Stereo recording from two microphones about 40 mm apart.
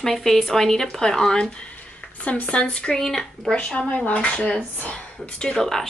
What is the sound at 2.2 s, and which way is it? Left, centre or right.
Speech, left.